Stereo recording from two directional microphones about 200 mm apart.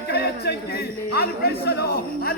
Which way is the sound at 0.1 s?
55° left (ahead or behind).